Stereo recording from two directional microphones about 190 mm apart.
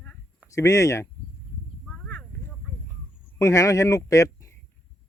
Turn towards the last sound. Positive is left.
turn(degrees=15)  # may be behind; listen again after turning